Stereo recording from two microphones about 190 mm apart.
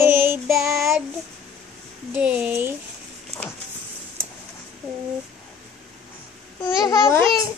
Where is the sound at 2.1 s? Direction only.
5° right (ahead or behind).